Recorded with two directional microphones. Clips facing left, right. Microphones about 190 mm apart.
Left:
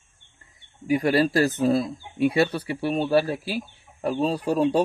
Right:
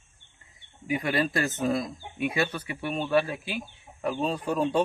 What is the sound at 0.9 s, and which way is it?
Speech, 40° left (ahead or behind).